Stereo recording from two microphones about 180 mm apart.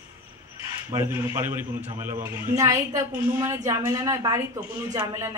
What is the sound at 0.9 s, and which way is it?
A woman's voice, 15° right (ahead or behind).